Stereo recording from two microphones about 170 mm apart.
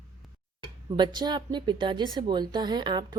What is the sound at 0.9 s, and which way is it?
A woman's voice, 25° right (ahead or behind).